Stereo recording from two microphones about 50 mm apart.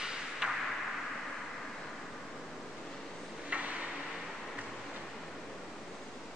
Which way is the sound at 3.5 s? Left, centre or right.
Right.